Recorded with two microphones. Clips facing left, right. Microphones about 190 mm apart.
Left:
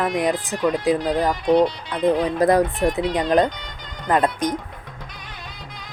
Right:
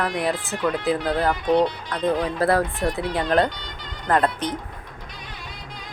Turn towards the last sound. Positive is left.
turn(degrees=15)  # may be behind; listen again after turning